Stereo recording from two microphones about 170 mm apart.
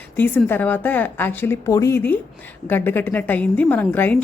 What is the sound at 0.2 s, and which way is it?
A woman's voice, 10° left (ahead or behind).